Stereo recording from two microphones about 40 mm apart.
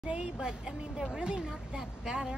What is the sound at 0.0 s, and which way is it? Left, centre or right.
Speech, right.